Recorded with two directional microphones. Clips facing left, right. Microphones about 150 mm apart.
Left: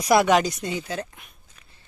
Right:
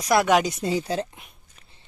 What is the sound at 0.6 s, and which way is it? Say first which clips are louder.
Speech: right 4 dB; 35° right (ahead or behind).